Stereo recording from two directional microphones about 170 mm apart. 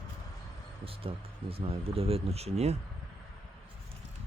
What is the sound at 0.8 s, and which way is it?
Speech, 35° right (ahead or behind).